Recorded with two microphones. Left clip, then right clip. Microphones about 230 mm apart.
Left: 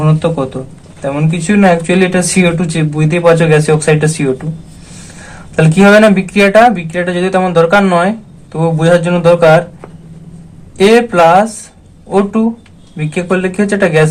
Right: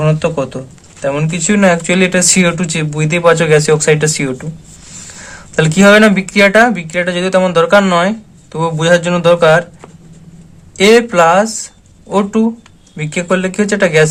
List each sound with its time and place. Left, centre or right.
0.0 s speech: right
5.5 s speech: right
10.8 s speech: right